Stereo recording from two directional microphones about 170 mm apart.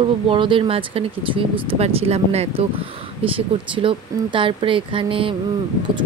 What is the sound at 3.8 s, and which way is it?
Speech, 30° right (ahead or behind).